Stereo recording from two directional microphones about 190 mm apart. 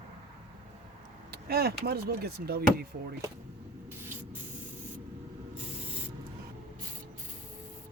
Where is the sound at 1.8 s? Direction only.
55° right (ahead or behind).